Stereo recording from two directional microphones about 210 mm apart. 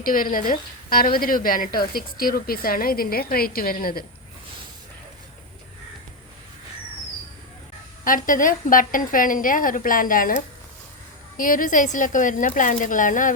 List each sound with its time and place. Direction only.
0.0 s a woman's voice: 40° left (ahead or behind)
8.0 s a woman's voice: 40° left (ahead or behind)